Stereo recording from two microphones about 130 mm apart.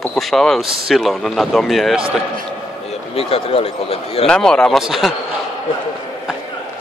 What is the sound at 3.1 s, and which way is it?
Speech, 50° left (ahead or behind).